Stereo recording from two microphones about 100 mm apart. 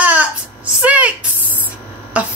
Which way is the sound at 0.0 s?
15° right (ahead or behind).